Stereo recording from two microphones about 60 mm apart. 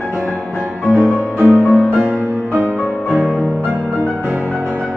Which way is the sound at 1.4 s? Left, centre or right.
Left.